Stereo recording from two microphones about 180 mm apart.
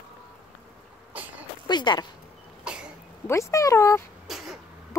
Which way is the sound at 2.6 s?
5° right (ahead or behind).